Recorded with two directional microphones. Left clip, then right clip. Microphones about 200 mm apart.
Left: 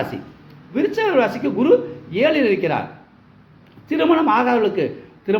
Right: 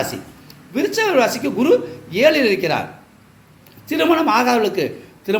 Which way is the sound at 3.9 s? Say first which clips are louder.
Right 1 dB; centre (ahead or behind).